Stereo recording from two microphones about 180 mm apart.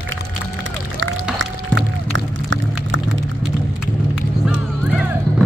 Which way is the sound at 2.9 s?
90° right.